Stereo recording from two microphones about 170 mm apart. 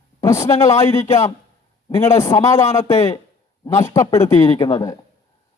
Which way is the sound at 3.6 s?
20° left (ahead or behind).